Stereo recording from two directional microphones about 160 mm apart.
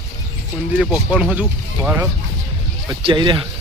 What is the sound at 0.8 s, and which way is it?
Speech, 5° right (ahead or behind).